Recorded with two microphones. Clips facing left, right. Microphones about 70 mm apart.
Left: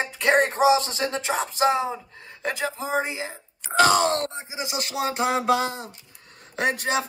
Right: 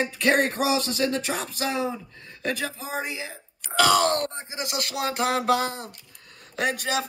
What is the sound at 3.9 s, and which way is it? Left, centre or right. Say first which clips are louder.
Speech: right 3 dB; left.